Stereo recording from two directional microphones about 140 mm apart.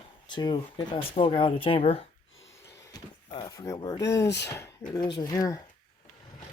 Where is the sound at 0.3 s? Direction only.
30° left (ahead or behind).